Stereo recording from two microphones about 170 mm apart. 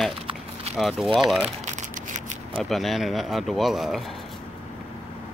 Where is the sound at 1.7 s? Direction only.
45° right (ahead or behind).